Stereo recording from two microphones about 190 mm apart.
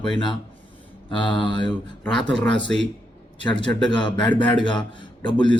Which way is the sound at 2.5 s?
70° right (ahead or behind).